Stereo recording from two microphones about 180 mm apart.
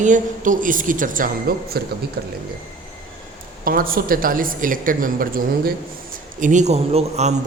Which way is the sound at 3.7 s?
55° right (ahead or behind).